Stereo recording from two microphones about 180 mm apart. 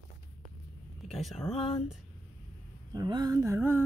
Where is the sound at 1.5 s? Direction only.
30° left (ahead or behind).